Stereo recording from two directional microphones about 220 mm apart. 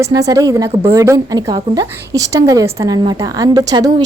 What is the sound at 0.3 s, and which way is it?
A woman's voice, 15° right (ahead or behind).